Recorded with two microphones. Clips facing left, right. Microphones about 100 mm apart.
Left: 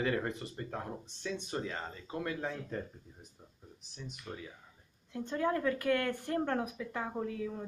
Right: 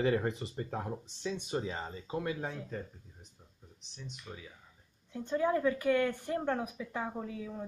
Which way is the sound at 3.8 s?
5° left (ahead or behind).